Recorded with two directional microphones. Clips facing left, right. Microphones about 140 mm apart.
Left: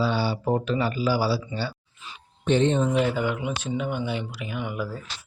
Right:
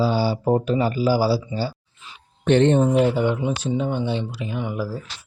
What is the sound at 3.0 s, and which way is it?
Speech, 25° right (ahead or behind).